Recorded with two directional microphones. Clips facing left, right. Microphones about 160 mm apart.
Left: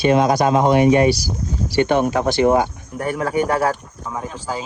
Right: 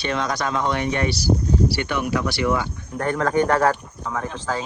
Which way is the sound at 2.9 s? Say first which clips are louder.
Even; 10° left (ahead or behind).